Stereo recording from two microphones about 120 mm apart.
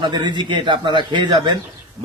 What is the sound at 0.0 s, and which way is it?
Speech, 40° right (ahead or behind).